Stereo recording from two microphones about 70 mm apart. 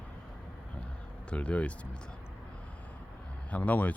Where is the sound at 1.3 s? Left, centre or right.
Centre.